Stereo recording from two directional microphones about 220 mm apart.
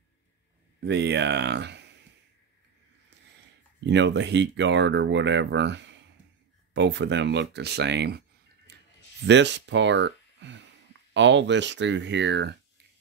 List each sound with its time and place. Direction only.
0.8 s speech: 50° right (ahead or behind)
3.8 s speech: 55° right (ahead or behind)
9.2 s speech: 55° right (ahead or behind)